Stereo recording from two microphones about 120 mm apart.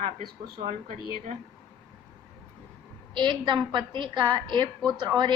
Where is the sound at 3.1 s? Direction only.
40° right (ahead or behind).